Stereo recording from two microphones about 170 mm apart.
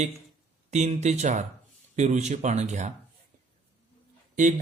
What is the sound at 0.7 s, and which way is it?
Speech, 40° right (ahead or behind).